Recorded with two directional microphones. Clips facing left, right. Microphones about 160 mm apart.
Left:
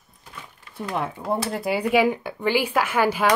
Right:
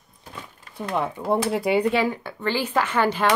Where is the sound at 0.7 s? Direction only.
Centre (ahead or behind).